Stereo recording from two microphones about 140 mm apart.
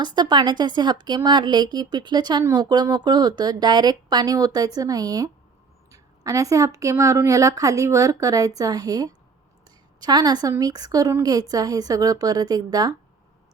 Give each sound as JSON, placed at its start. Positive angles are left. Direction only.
{"t": 0.0, "sound": "a woman's voice", "side_deg": -30}